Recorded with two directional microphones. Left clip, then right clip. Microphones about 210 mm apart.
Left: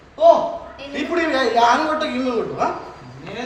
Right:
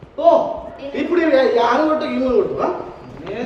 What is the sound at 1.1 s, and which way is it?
Speech, 35° left (ahead or behind).